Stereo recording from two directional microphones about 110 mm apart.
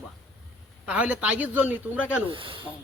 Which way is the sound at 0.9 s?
15° right (ahead or behind).